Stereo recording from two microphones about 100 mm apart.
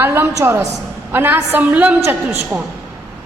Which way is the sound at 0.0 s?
25° right (ahead or behind).